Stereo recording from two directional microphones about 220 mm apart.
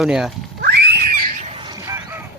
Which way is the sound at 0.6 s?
45° right (ahead or behind).